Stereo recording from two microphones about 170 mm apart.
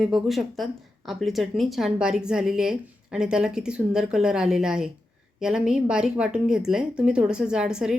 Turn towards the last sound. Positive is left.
turn(degrees=-5)  # may be behind; listen again after turning